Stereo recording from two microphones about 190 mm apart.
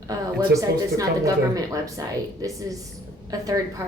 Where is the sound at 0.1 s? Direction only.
15° right (ahead or behind).